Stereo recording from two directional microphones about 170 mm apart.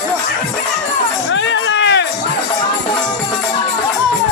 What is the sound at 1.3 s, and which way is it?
Music, 90° left.